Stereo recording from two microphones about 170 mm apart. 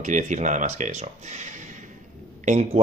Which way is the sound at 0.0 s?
45° right (ahead or behind).